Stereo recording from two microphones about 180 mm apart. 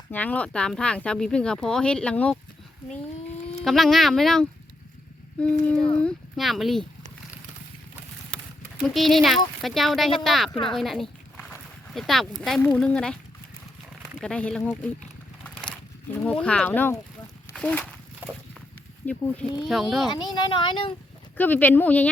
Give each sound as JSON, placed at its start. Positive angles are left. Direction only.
{"t": 0.1, "sound": "speech", "side_deg": 10}
{"t": 3.6, "sound": "speech", "side_deg": 0}
{"t": 8.8, "sound": "speech", "side_deg": 0}
{"t": 10.7, "sound": "a sound", "side_deg": 0}
{"t": 11.9, "sound": "speech", "side_deg": 0}
{"t": 14.2, "sound": "speech", "side_deg": 5}
{"t": 15.4, "sound": "a sound", "side_deg": 5}
{"t": 16.2, "sound": "speech", "side_deg": 5}
{"t": 19.0, "sound": "speech", "side_deg": 5}
{"t": 20.1, "sound": "speech", "side_deg": 25}
{"t": 21.3, "sound": "speech", "side_deg": 10}